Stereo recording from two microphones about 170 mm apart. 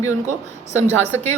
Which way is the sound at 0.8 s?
15° left (ahead or behind).